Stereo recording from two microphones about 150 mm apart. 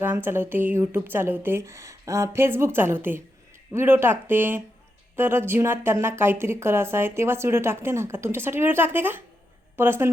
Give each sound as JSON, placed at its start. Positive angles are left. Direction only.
{"t": 0.0, "sound": "speech", "side_deg": -15}